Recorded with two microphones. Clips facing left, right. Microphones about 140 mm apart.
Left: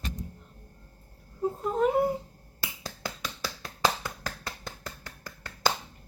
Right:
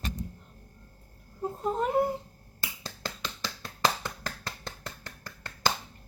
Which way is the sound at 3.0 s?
10° left (ahead or behind).